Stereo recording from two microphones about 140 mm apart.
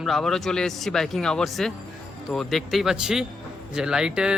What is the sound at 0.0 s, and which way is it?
Speech, centre (ahead or behind).